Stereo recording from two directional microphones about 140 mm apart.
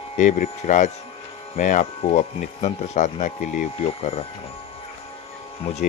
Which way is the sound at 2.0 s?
55° left (ahead or behind).